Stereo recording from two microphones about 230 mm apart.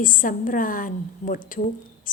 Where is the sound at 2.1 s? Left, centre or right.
Left.